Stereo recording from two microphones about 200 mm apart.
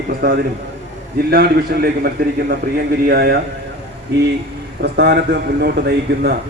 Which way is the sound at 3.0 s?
55° right (ahead or behind).